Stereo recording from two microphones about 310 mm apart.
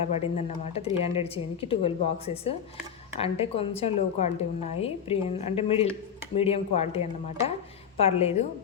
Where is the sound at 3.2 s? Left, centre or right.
Centre.